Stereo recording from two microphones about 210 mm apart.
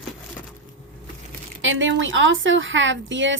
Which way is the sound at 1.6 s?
65° right (ahead or behind).